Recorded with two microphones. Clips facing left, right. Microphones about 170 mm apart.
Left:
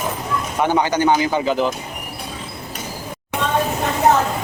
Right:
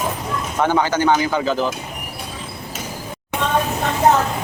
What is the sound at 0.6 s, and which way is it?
A man's voice, 15° left (ahead or behind).